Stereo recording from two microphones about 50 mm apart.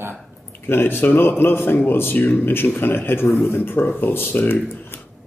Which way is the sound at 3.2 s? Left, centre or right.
Left.